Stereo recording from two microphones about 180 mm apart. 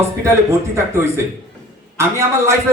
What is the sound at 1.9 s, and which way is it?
Speech, 15° right (ahead or behind).